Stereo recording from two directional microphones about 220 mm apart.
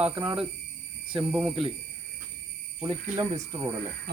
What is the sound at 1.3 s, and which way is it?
Speech, 5° right (ahead or behind).